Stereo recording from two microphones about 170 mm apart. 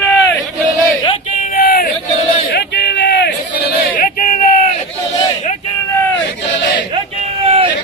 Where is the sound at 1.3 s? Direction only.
60° left (ahead or behind).